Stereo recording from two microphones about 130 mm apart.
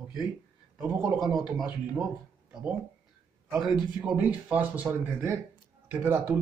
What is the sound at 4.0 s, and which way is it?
A man's voice, 5° right (ahead or behind).